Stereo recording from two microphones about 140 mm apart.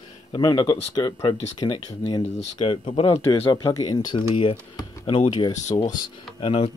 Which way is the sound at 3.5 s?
25° left (ahead or behind).